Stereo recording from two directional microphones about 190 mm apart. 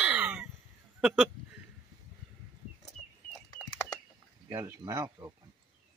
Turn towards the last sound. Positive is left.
turn(degrees=-15)  # may be behind; listen again after turning